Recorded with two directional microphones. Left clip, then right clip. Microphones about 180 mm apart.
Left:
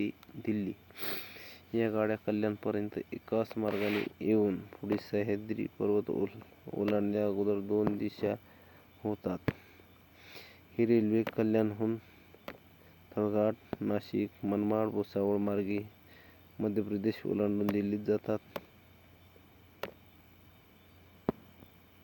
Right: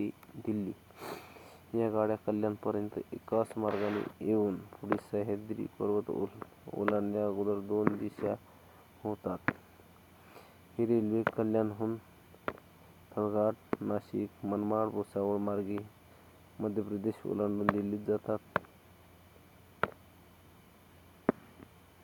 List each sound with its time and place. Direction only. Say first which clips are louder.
0.0 s sniff: left 1 dB; 10° left (ahead or behind)
1.9 s speech: right 2 dB; 15° left (ahead or behind)
13.1 s speech: left 1 dB; 25° left (ahead or behind)